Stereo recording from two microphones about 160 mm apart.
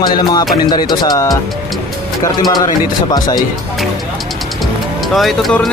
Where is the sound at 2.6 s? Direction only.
25° left (ahead or behind).